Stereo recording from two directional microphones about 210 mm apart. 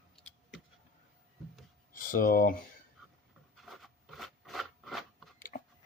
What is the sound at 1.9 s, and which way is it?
Speech, 40° left (ahead or behind).